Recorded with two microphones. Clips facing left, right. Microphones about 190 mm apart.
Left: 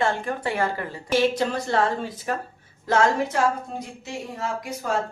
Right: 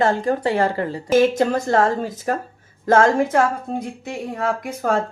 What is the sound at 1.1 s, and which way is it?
Speech, 45° right (ahead or behind).